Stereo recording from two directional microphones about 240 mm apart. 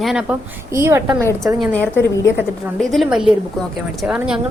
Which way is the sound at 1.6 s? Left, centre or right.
Centre.